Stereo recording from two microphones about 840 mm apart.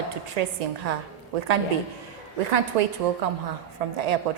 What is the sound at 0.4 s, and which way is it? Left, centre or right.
Speech, right.